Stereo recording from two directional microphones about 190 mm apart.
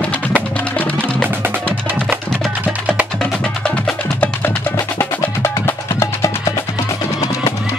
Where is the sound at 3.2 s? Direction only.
5° left (ahead or behind).